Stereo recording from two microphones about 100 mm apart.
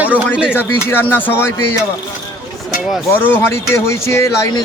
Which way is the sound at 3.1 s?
20° left (ahead or behind).